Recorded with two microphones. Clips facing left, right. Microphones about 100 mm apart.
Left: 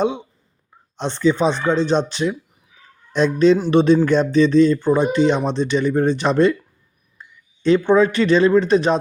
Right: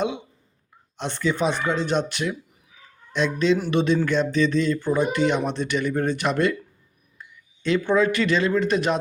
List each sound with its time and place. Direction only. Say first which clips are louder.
0.9 s speech: left 7 dB; 25° left (ahead or behind)
3.1 s speech: left 7 dB; 35° left (ahead or behind)